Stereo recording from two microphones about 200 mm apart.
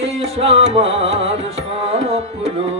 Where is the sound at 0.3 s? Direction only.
30° right (ahead or behind).